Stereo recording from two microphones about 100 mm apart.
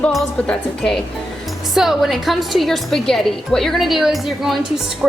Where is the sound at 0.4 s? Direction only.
10° left (ahead or behind).